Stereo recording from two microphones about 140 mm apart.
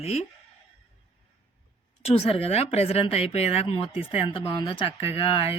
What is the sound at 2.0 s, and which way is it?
A woman's voice, 50° left (ahead or behind).